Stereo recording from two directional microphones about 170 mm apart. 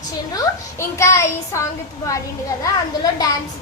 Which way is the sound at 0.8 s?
15° left (ahead or behind).